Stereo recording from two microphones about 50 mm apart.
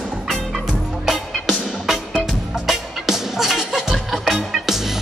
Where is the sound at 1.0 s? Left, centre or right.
Centre.